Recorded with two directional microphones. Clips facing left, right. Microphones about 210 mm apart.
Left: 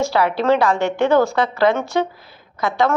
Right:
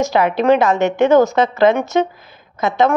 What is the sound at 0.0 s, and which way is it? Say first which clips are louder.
A woman's voice: right 3 dB; 20° right (ahead or behind).